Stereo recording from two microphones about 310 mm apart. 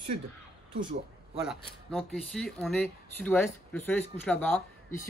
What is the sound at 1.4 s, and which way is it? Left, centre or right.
Speech, centre.